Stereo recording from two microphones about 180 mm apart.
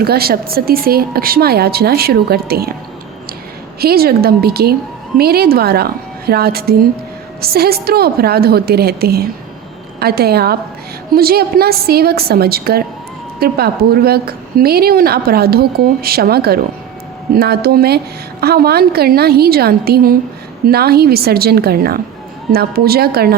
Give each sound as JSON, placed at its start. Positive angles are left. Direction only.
{"t": 0.0, "sound": "a woman's voice", "side_deg": -60}
{"t": 3.8, "sound": "a woman's voice", "side_deg": -60}